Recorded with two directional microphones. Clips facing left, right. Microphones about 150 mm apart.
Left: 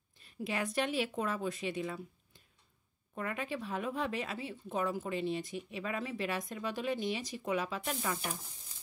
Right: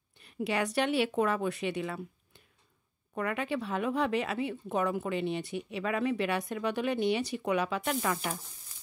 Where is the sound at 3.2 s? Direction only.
75° right (ahead or behind).